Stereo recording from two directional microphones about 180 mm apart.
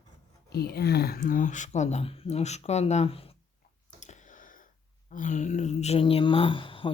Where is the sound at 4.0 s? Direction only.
45° left (ahead or behind).